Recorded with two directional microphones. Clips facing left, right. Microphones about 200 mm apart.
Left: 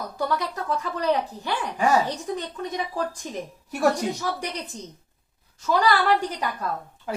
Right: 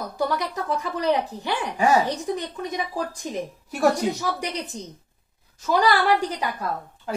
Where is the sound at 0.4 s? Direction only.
15° right (ahead or behind).